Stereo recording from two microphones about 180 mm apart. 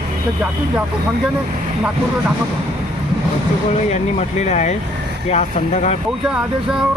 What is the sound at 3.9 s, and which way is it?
Speech, 40° left (ahead or behind).